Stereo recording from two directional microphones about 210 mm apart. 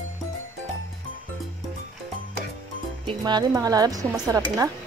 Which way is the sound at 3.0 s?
20° right (ahead or behind).